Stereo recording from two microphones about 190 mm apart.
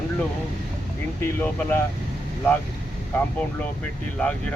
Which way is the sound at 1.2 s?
10° left (ahead or behind).